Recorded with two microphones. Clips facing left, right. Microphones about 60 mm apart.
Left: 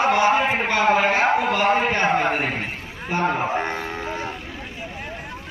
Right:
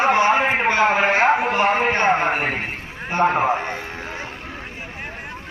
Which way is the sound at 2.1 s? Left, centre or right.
Right.